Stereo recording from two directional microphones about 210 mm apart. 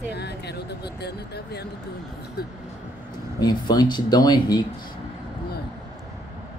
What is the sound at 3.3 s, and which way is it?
Speech, 20° left (ahead or behind).